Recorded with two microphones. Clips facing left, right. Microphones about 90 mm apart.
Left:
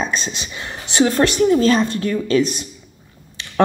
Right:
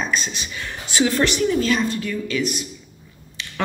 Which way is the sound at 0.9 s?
45° left (ahead or behind).